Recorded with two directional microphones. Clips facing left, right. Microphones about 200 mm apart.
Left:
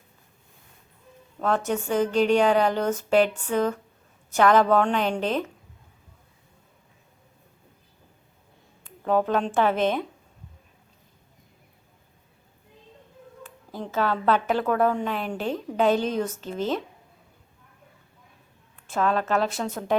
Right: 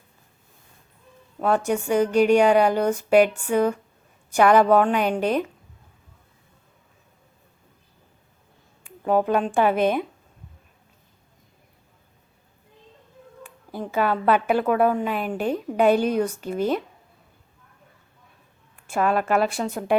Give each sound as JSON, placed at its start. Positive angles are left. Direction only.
{"t": 1.4, "sound": "a woman's voice", "side_deg": -10}
{"t": 8.8, "sound": "speech", "side_deg": -10}
{"t": 13.4, "sound": "a woman's voice", "side_deg": -15}
{"t": 18.9, "sound": "a woman's voice", "side_deg": -10}